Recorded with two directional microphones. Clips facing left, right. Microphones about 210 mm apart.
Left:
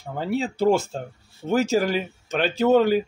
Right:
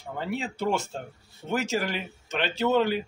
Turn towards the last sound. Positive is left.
turn(degrees=45)  # may be behind; listen again after turning